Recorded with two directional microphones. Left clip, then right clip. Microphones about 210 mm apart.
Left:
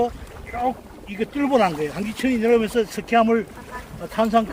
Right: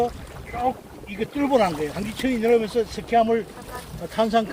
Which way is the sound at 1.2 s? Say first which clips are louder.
Left 1 dB; 35° left (ahead or behind).